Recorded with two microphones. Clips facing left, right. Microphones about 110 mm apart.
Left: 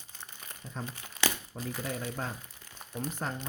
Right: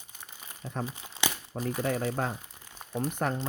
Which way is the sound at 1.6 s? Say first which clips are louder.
Right 10 dB; 50° right (ahead or behind).